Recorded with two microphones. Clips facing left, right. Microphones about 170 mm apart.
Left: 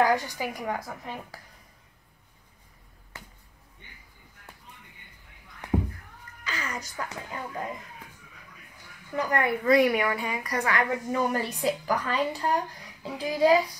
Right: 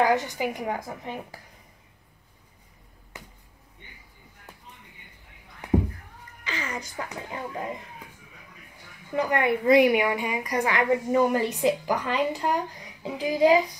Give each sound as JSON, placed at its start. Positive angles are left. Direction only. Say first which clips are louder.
{"t": 0.0, "sound": "speech", "louder": "right 1 dB", "side_deg": -20}
{"t": 6.4, "sound": "music", "louder": "right 2 dB", "side_deg": -25}
{"t": 7.0, "sound": "speech", "louder": "right 1 dB", "side_deg": -20}
{"t": 9.1, "sound": "a woman's voice", "louder": "right 3 dB", "side_deg": -20}